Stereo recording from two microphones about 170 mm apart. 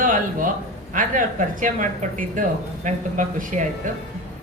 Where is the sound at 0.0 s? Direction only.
50° right (ahead or behind).